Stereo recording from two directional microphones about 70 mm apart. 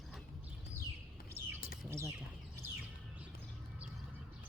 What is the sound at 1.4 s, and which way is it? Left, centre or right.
Bird, right.